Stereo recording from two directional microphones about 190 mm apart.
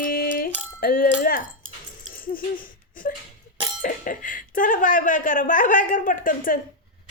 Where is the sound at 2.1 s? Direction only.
50° left (ahead or behind).